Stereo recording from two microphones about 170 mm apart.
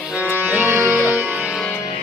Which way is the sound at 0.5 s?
15° right (ahead or behind).